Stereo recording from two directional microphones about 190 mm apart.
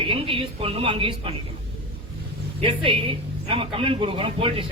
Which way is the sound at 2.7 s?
30° right (ahead or behind).